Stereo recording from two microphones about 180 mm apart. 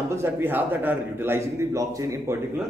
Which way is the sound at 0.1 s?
10° right (ahead or behind).